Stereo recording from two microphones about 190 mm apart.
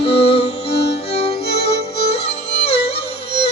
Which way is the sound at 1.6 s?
35° left (ahead or behind).